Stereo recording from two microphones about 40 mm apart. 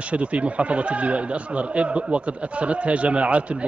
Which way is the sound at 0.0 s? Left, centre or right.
Right.